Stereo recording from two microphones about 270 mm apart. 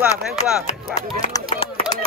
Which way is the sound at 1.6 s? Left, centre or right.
Left.